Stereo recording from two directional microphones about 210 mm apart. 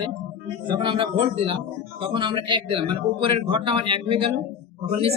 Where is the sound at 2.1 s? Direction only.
20° right (ahead or behind).